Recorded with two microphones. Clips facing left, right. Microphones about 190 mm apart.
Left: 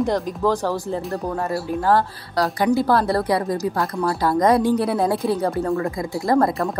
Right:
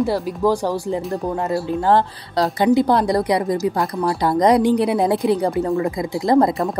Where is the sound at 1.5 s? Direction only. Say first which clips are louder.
Right 2 dB; 25° right (ahead or behind).